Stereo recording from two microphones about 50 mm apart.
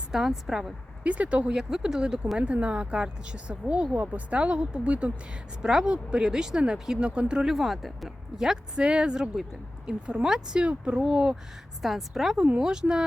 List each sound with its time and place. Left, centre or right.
0.1 s speech: centre
1.0 s speech: right
1.5 s speech: centre
7.5 s speech: centre
8.4 s speech: centre
11.8 s speech: centre
12.5 s speech: centre